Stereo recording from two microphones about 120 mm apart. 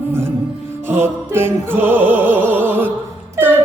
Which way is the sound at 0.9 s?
20° right (ahead or behind).